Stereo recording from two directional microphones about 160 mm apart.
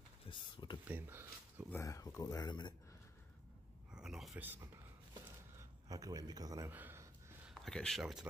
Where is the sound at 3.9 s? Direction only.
5° right (ahead or behind).